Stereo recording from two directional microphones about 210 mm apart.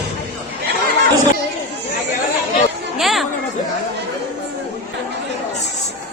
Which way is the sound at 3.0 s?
Centre (ahead or behind).